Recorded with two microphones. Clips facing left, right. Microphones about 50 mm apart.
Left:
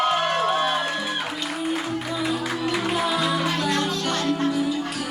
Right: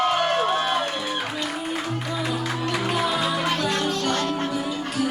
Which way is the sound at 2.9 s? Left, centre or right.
Centre.